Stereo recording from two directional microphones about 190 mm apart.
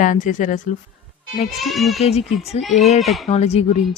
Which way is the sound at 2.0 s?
35° left (ahead or behind).